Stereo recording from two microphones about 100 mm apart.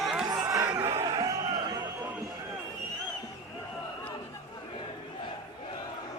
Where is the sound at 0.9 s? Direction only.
40° right (ahead or behind).